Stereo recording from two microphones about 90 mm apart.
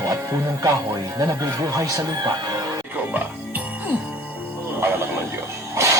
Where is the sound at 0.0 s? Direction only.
35° right (ahead or behind).